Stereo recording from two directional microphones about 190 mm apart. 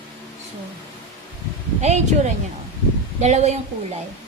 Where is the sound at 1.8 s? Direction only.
35° right (ahead or behind).